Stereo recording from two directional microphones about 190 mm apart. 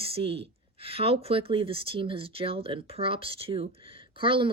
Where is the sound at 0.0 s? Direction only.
30° right (ahead or behind).